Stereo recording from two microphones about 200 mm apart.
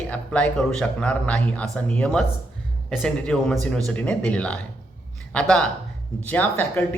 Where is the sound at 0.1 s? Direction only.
5° left (ahead or behind).